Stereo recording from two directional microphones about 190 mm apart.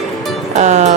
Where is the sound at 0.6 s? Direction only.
35° right (ahead or behind).